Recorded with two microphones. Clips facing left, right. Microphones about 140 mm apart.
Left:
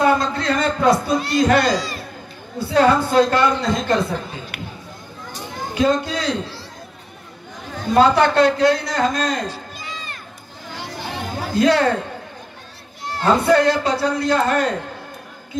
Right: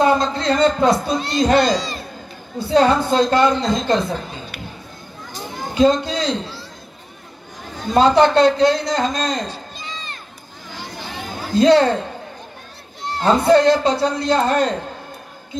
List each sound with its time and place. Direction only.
0.0 s a child's voice: 25° right (ahead or behind)
5.8 s a man's voice: 25° right (ahead or behind)
7.9 s a man's voice: 25° right (ahead or behind)
11.5 s a man's voice: 25° right (ahead or behind)
13.0 s a man's voice: 25° right (ahead or behind)